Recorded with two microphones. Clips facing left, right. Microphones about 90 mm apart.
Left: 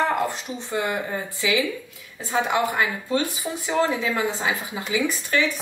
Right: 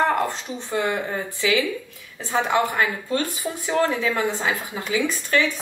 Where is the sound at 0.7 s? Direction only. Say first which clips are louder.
Right 2 dB; 10° left (ahead or behind).